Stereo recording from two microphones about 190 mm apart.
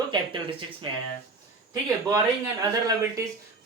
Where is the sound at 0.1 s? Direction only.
25° right (ahead or behind).